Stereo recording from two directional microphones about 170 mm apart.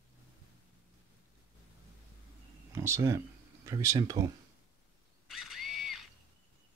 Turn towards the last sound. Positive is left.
turn(degrees=0)  # may be behind; listen again after turning